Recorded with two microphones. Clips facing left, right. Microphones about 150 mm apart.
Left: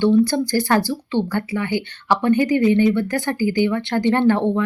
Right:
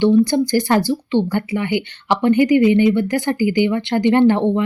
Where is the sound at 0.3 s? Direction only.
20° right (ahead or behind).